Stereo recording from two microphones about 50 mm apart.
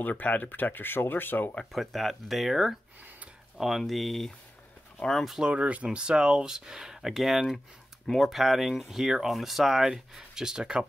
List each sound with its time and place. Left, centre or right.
0.0 s speech: left
1.7 s speech: centre
5.4 s speech: right